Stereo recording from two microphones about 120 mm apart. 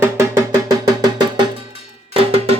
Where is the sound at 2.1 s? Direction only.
55° right (ahead or behind).